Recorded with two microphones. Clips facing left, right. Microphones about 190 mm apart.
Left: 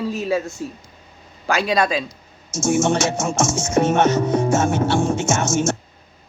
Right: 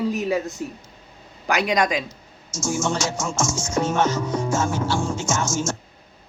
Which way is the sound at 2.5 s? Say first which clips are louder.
Left 6 dB; 65° left (ahead or behind).